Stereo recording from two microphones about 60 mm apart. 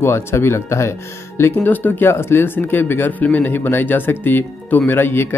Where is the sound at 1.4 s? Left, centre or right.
Left.